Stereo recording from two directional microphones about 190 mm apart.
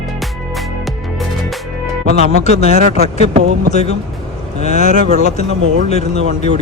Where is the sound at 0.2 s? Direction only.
Centre (ahead or behind).